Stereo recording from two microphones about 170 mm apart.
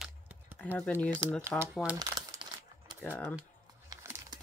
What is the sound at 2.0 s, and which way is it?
Crumpling, 20° right (ahead or behind).